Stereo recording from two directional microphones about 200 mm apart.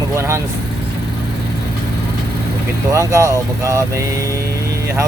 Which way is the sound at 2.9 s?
15° right (ahead or behind).